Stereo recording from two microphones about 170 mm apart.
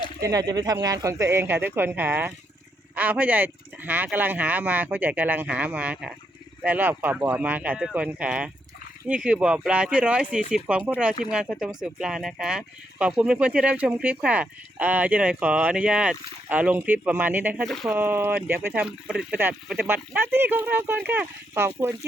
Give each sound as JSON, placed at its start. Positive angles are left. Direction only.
{"t": 0.2, "sound": "speech", "side_deg": -20}